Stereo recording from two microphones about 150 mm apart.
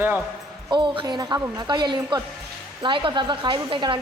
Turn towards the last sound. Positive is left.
turn(degrees=-35)  # may be behind; listen again after turning